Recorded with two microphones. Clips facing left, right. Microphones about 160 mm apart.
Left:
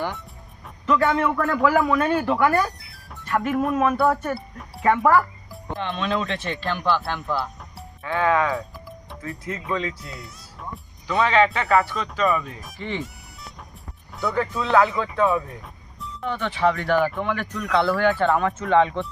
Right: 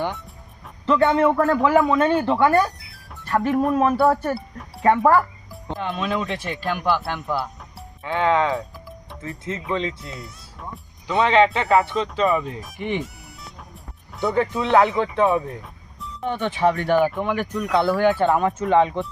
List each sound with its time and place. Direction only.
0.9 s speech: 30° right (ahead or behind)
1.6 s speech: 25° right (ahead or behind)
2.7 s music: centre (ahead or behind)
3.2 s speech: 30° right (ahead or behind)
5.5 s speech: centre (ahead or behind); by 8.5 s 20° right (ahead or behind)
8.5 s music: centre (ahead or behind)
9.4 s speech: 25° right (ahead or behind)
10.2 s music: centre (ahead or behind)
11.0 s speech: 20° right (ahead or behind)
14.2 s speech: 20° right (ahead or behind)